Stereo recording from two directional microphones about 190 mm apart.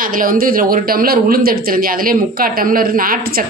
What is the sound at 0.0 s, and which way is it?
Speech, 45° right (ahead or behind).